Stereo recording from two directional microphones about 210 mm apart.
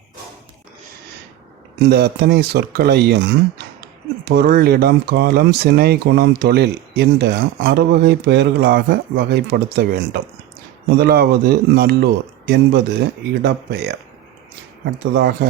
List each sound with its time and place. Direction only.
1.8 s speech: 50° right (ahead or behind)
15.1 s speech: 50° right (ahead or behind)